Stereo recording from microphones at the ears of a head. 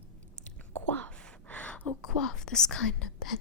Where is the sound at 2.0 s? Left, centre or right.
Left.